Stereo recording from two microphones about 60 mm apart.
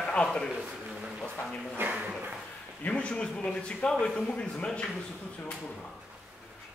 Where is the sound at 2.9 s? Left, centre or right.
Centre.